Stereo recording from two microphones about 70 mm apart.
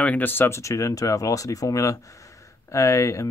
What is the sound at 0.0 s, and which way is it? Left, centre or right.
Speech, left.